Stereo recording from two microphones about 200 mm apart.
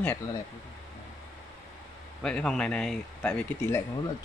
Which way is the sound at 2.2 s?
5° left (ahead or behind).